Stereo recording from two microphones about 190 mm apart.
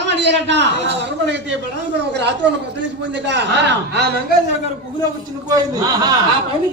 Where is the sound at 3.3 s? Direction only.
65° right (ahead or behind).